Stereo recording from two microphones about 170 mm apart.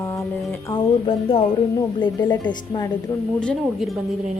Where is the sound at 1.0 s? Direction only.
35° left (ahead or behind).